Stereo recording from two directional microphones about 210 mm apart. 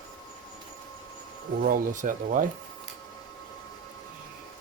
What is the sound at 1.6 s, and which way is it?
Speech, 40° right (ahead or behind).